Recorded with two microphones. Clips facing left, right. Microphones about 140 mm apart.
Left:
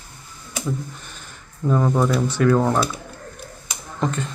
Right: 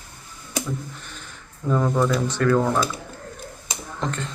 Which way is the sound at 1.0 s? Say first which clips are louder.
Right 1 dB; 10° left (ahead or behind).